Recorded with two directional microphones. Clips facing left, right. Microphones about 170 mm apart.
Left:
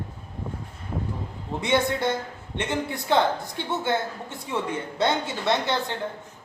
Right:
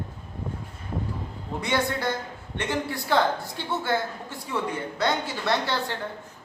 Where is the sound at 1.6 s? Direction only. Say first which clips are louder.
Left 3 dB; 25° left (ahead or behind).